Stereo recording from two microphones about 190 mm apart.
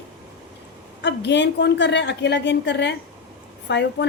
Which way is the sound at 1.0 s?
65° left (ahead or behind).